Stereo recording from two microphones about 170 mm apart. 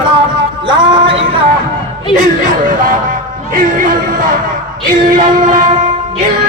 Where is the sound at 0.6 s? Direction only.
30° right (ahead or behind).